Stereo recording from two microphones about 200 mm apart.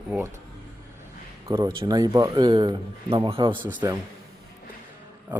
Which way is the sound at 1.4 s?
15° right (ahead or behind).